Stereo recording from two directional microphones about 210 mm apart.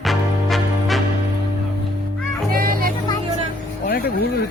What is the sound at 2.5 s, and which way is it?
Music, 45° right (ahead or behind).